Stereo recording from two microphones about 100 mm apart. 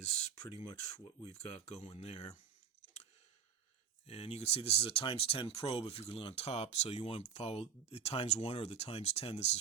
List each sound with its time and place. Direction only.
0.5 s speech: 90° left
4.0 s speech: 90° left